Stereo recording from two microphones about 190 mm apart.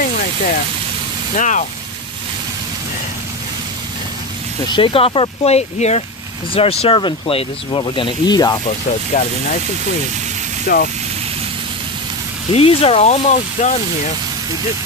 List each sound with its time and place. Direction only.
1.3 s speech: 40° left (ahead or behind)
4.7 s speech: 25° left (ahead or behind)
9.1 s speech: 45° left (ahead or behind)
10.7 s speech: 55° left (ahead or behind)
12.4 s speech: 30° left (ahead or behind)